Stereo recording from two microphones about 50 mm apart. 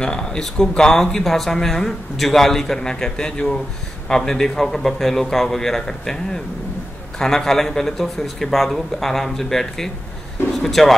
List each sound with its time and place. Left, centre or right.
0.0 s speech: centre